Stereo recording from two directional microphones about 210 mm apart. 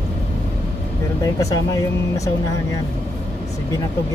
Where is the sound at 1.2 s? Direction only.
15° left (ahead or behind).